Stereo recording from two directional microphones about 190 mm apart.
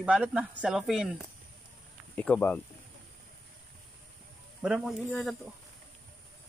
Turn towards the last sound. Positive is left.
turn(degrees=0)  # may be behind; listen again after turning